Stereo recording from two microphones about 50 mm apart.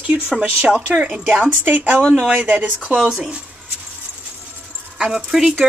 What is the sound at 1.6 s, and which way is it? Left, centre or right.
Speech, right.